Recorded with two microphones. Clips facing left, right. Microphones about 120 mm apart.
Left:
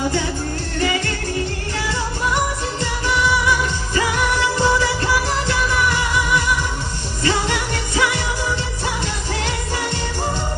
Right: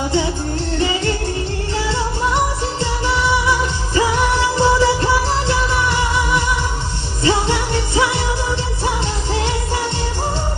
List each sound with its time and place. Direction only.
0.8 s music: 25° right (ahead or behind)
2.8 s music of asia: 25° right (ahead or behind)
7.3 s music: 25° right (ahead or behind)